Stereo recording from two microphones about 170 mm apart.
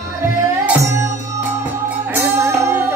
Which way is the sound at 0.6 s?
15° right (ahead or behind).